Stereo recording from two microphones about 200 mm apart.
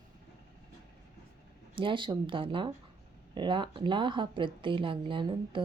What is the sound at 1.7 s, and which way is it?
Speech, 25° right (ahead or behind).